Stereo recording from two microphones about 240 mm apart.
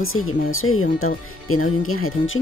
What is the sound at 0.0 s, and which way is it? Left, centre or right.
Speech, left.